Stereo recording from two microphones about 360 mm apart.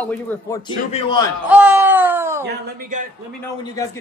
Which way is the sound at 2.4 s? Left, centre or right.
Right.